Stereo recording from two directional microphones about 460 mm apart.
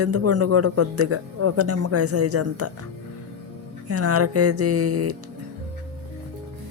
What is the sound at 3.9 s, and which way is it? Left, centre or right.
A man's voice, right.